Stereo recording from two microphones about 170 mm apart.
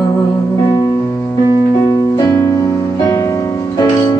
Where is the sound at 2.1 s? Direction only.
20° left (ahead or behind).